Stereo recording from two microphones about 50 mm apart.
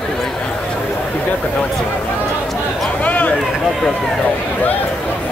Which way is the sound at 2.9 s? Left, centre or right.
Left.